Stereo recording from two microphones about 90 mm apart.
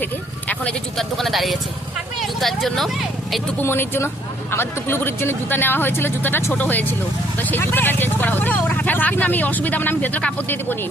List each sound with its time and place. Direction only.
0.0 s a sound: 15° left (ahead or behind)
0.9 s speech: centre (ahead or behind)
3.6 s speech: 25° left (ahead or behind)